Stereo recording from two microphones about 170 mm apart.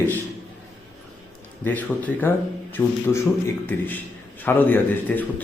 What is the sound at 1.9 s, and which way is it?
Speech, 5° left (ahead or behind).